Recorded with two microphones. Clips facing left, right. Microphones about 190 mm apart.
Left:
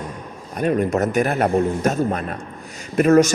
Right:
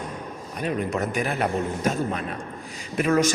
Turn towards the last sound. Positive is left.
turn(degrees=45)  # may be behind; listen again after turning